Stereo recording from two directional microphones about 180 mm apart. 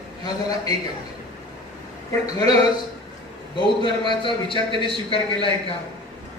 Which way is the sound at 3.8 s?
25° left (ahead or behind).